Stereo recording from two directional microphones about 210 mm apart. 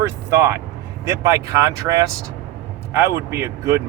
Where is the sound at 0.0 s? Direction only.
15° right (ahead or behind).